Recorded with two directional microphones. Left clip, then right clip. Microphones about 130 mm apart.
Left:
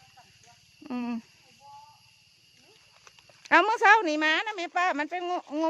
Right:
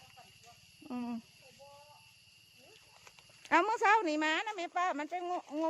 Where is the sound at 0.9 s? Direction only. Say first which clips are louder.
Left 7 dB; 80° left.